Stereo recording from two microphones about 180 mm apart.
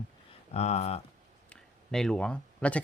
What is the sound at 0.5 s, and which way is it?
Speech, 35° left (ahead or behind).